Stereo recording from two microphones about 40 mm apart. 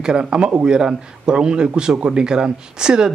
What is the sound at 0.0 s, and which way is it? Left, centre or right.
Speech, right.